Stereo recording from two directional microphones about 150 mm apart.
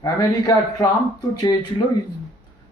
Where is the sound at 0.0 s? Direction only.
25° left (ahead or behind).